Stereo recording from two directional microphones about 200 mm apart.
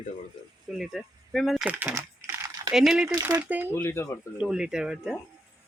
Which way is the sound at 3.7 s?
10° left (ahead or behind).